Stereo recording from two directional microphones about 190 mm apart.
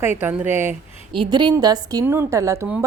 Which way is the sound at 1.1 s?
25° right (ahead or behind).